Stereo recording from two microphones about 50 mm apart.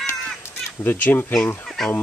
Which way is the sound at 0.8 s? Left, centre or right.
Left.